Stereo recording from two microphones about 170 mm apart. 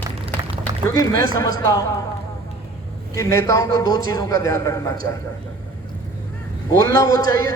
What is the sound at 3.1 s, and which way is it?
A man's voice, 20° left (ahead or behind).